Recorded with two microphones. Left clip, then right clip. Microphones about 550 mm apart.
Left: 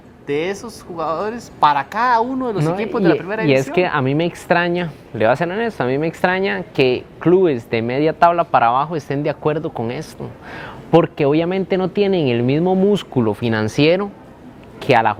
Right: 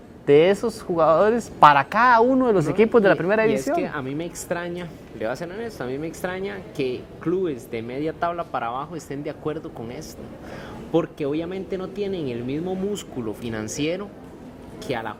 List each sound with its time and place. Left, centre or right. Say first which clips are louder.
0.3 s speech: right 6 dB; right
3.8 s a woman's voice: left 10 dB; left